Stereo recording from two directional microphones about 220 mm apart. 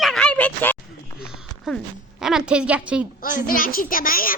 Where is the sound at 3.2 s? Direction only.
40° left (ahead or behind).